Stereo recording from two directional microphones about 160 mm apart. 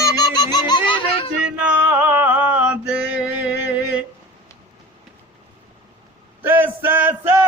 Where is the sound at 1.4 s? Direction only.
10° right (ahead or behind).